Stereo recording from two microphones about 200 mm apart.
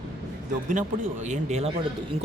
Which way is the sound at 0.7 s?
35° right (ahead or behind).